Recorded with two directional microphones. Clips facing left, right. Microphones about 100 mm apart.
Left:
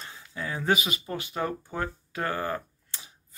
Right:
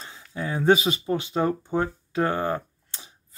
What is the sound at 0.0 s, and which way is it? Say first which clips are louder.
Speech: right 4 dB; 25° right (ahead or behind).